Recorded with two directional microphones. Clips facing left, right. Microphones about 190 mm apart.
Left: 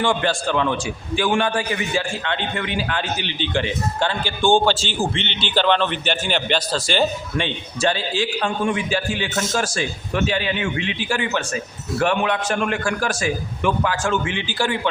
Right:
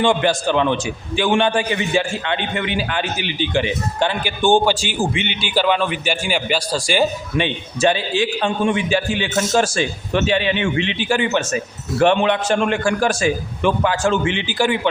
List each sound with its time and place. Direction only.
0.0 s a man's voice: 20° right (ahead or behind)